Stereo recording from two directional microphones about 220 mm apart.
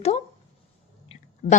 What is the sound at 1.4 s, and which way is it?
Speech, 35° left (ahead or behind).